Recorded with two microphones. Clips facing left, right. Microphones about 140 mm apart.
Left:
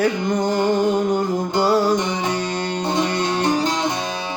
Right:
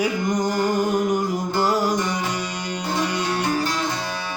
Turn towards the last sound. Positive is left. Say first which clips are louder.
# left 4 dB
turn(degrees=20)  # may be behind; listen again after turning